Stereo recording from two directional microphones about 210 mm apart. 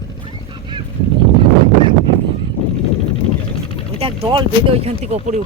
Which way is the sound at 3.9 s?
25° right (ahead or behind).